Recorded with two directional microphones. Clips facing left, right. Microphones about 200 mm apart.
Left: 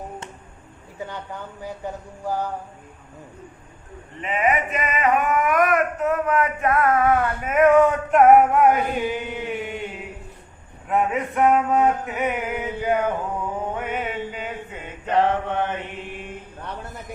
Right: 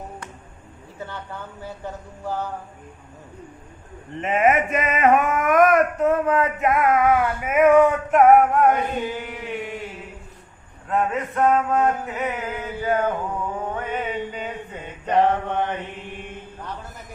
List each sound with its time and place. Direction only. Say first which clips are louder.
0.9 s a sound: left 2 dB; 15° left (ahead or behind)
4.2 s speech: right 3 dB; 45° right (ahead or behind)
6.0 s male singing: right 2 dB; 25° right (ahead or behind); by 8.8 s 5° left (ahead or behind)
9.0 s mantra: left 3 dB; 20° left (ahead or behind)
9.5 s chant: right 2 dB; centre (ahead or behind)
10.8 s a sound: left 1 dB; 10° left (ahead or behind)
13.7 s mantra: even; 10° left (ahead or behind)
14.3 s a sound: right 1 dB; 5° left (ahead or behind)
15.0 s male singing: right 1 dB; 15° right (ahead or behind)